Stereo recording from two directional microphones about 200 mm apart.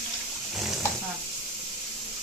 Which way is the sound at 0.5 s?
Centre (ahead or behind).